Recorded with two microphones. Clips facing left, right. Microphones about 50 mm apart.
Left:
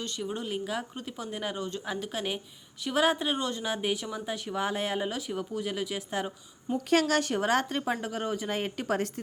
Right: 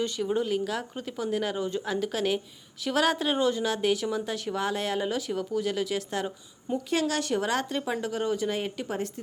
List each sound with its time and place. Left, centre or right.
0.0 s speech: centre
0.5 s speech: centre
1.5 s speech: centre
1.8 s speech: centre
3.3 s speech: centre
3.6 s a woman's voice: centre
5.0 s speech: centre
6.7 s a woman's voice: left
7.1 s a woman's voice: left
8.0 s speech: centre
8.4 s a woman's voice: left